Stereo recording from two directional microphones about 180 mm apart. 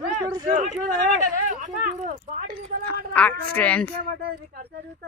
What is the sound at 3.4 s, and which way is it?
Speech, 10° left (ahead or behind).